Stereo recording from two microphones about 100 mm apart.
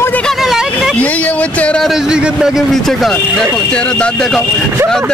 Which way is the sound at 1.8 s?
5° right (ahead or behind).